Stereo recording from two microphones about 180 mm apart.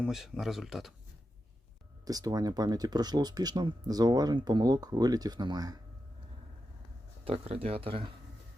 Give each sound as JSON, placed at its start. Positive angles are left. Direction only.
{"t": 0.0, "sound": "speech", "side_deg": 0}
{"t": 2.0, "sound": "speech", "side_deg": -20}
{"t": 7.3, "sound": "speech", "side_deg": -35}